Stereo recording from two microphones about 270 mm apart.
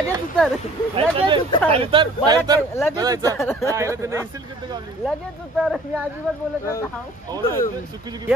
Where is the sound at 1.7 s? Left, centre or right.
Centre.